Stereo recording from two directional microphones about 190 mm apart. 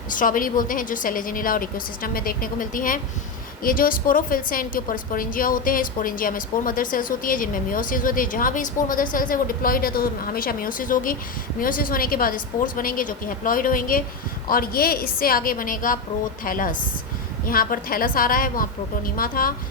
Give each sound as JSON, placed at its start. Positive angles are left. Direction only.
{"t": 0.1, "sound": "a woman's voice", "side_deg": 45}